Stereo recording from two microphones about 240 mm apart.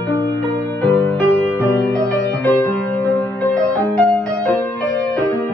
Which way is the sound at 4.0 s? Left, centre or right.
Centre.